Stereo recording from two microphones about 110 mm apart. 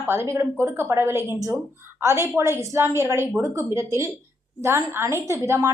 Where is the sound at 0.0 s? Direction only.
25° right (ahead or behind).